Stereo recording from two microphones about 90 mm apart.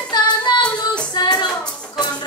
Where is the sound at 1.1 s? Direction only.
50° left (ahead or behind).